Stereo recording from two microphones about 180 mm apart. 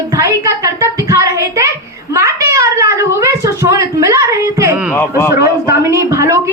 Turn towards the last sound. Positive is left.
turn(degrees=-15)  # may be behind; listen again after turning